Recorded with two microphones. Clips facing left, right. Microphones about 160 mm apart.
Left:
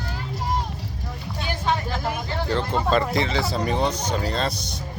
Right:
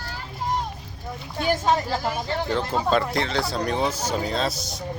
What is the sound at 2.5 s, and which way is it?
Speech, 5° right (ahead or behind).